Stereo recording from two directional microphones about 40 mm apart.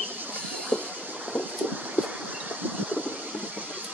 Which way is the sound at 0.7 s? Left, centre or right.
Right.